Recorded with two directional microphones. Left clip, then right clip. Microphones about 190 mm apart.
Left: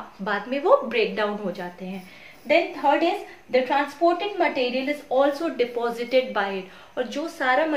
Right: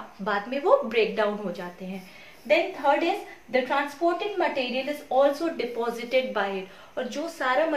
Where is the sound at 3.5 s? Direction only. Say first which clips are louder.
Left 3 dB; 20° left (ahead or behind).